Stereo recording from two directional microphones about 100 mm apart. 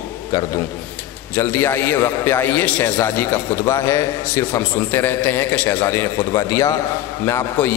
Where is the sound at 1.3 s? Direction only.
25° left (ahead or behind).